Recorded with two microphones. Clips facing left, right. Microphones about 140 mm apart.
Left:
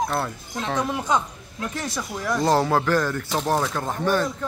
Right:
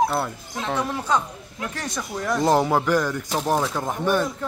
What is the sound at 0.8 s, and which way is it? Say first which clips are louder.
A woman's voice: left 1 dB; 15° left (ahead or behind).